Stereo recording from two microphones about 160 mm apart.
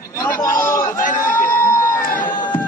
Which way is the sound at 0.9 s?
55° left (ahead or behind).